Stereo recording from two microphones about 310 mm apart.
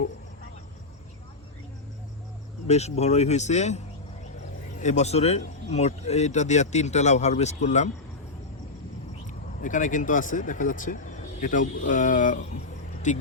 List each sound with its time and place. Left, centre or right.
2.6 s a man's voice: left
4.8 s a man's voice: left
9.6 s speech: left